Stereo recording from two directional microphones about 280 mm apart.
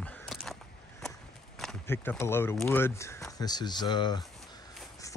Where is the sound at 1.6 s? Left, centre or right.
Centre.